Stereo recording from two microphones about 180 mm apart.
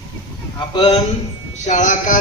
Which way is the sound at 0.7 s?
25° left (ahead or behind).